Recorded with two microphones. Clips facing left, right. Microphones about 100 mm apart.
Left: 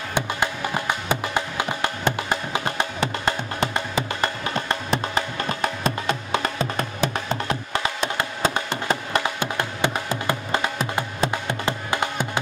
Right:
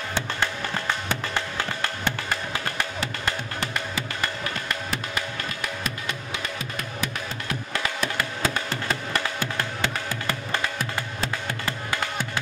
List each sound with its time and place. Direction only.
0.1 s music: 15° left (ahead or behind); by 6.5 s 40° left (ahead or behind)
6.6 s music: 30° left (ahead or behind)